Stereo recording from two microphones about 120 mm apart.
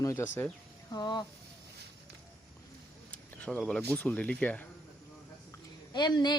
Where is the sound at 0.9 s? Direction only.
35° left (ahead or behind).